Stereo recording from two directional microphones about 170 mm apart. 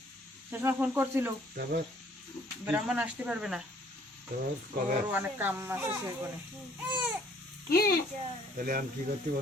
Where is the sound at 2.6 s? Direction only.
5° right (ahead or behind).